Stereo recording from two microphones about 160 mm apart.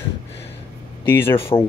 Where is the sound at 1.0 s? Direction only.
15° left (ahead or behind).